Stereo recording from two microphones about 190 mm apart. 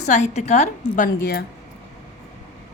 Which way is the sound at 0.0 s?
35° left (ahead or behind).